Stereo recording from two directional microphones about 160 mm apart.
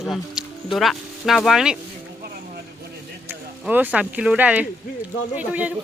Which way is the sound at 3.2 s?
10° right (ahead or behind).